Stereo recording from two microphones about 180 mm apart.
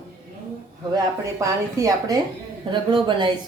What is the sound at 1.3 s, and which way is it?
Speech, 20° right (ahead or behind).